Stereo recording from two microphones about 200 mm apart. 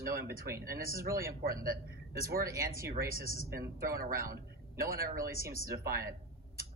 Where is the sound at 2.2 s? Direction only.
45° right (ahead or behind).